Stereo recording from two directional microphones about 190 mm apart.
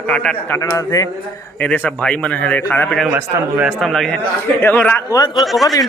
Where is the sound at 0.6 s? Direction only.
15° left (ahead or behind).